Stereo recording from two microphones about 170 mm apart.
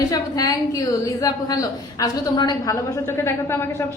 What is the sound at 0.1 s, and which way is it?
A woman's voice, 20° left (ahead or behind).